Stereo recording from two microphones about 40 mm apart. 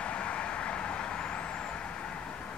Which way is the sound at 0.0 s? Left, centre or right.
Left.